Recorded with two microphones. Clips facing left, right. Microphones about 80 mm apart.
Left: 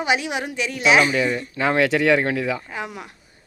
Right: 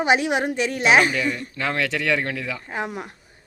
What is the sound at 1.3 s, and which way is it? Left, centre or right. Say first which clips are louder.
Speech: left 2 dB; left.